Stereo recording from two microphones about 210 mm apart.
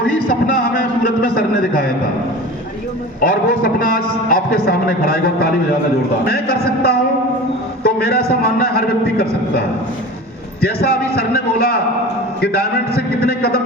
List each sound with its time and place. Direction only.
0.3 s a sound: 40° left (ahead or behind)
3.2 s a man's voice: 40° left (ahead or behind)
7.9 s a man's voice: 45° left (ahead or behind)
10.6 s a man's voice: 50° left (ahead or behind)